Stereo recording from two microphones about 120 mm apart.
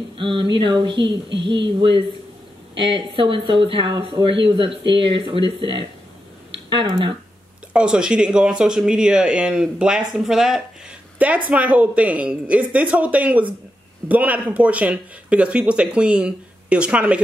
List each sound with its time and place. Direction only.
0.2 s speech: 45° right (ahead or behind)
2.9 s speech: 45° right (ahead or behind)
6.5 s speech: 45° right (ahead or behind)
7.7 s speech: 5° right (ahead or behind)